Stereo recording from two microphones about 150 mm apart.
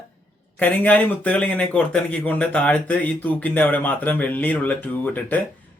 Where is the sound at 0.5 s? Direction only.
10° left (ahead or behind).